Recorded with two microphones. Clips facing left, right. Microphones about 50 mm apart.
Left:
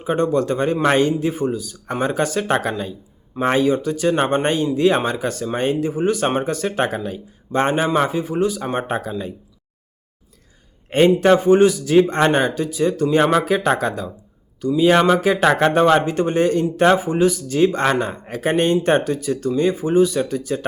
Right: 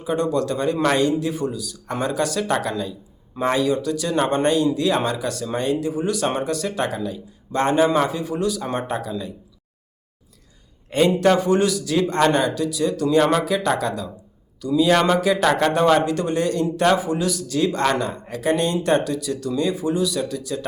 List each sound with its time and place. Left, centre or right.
0.0 s speech: left
7.6 s a man's voice: left
8.8 s speech: left
10.8 s a man's voice: left
14.7 s a man's voice: left